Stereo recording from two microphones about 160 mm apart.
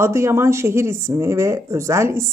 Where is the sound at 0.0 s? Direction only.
15° right (ahead or behind).